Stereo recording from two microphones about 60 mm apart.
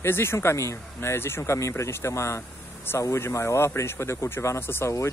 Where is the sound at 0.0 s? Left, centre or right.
Left.